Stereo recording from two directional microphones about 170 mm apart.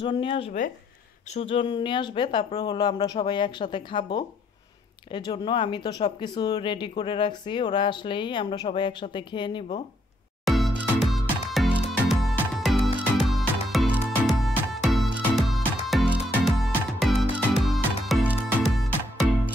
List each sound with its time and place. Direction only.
0.0 s speech: 30° left (ahead or behind)
10.4 s music: centre (ahead or behind)